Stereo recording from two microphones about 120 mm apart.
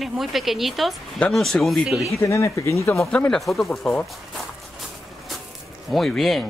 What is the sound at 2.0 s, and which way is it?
Speech, 25° left (ahead or behind).